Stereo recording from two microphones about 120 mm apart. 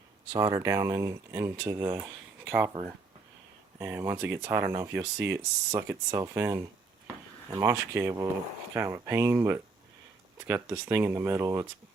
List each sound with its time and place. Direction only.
0.3 s speech: 30° right (ahead or behind)
3.8 s speech: 20° right (ahead or behind)